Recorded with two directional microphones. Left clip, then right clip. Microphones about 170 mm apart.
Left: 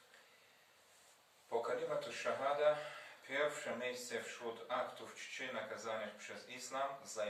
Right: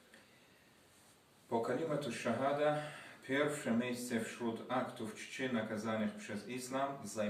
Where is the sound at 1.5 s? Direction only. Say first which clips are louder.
Right 2 dB; 20° right (ahead or behind).